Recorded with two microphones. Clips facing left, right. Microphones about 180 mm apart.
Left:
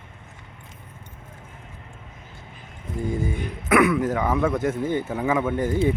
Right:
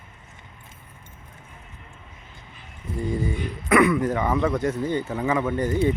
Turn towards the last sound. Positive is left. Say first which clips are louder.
# even
turn(degrees=5)  # may be behind; listen again after turning